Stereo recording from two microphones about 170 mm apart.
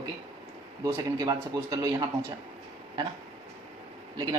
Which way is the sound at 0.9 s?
20° right (ahead or behind).